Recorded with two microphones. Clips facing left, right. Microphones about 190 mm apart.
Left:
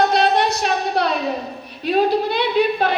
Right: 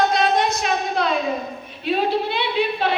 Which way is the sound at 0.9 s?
40° left (ahead or behind).